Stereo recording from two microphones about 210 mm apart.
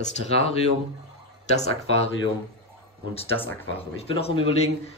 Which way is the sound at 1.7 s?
30° left (ahead or behind).